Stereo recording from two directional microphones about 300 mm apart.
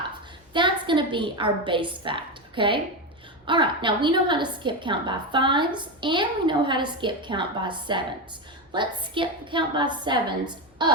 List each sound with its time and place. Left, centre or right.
0.5 s a woman's voice: centre